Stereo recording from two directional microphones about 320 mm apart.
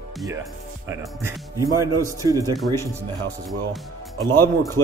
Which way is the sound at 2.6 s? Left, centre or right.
Centre.